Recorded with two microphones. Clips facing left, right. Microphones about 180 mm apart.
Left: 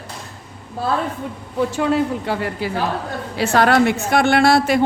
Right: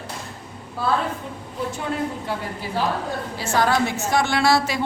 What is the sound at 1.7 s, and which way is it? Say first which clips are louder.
Speech: left 8 dB; 85° left.